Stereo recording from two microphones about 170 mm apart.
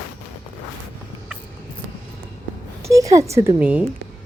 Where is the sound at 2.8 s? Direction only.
20° right (ahead or behind).